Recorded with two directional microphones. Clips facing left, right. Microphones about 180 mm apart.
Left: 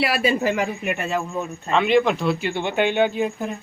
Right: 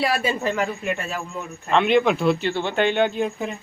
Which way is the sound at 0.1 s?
10° left (ahead or behind).